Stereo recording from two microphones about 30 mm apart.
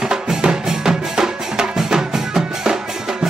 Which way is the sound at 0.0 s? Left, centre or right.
Right.